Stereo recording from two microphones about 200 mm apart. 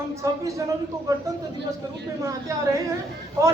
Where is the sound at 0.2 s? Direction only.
15° right (ahead or behind).